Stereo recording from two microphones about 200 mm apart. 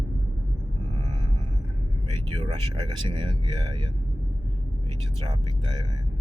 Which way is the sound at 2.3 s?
25° right (ahead or behind).